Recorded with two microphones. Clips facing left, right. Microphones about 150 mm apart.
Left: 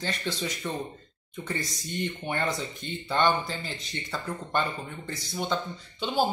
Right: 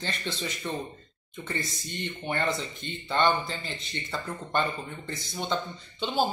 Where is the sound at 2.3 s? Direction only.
10° left (ahead or behind).